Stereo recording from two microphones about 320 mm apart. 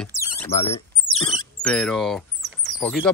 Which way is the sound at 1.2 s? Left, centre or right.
Centre.